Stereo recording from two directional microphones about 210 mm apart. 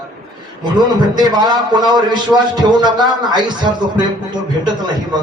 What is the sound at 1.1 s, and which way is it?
A man's voice, 20° right (ahead or behind).